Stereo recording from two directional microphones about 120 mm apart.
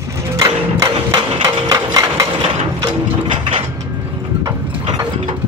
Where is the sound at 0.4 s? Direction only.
30° right (ahead or behind).